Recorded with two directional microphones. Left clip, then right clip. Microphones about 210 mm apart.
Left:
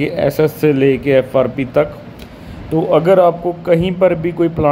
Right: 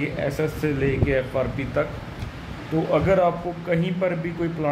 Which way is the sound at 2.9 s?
30° left (ahead or behind).